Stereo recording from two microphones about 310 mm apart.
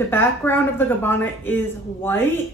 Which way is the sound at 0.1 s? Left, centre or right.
Centre.